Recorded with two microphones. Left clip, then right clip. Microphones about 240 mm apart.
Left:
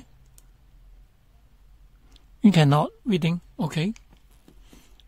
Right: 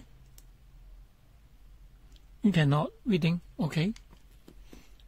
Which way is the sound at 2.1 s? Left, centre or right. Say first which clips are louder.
Left 8 dB; left.